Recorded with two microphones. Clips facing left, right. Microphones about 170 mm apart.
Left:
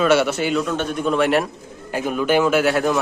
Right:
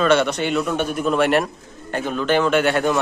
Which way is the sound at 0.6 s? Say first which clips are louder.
Right 1 dB; 10° right (ahead or behind).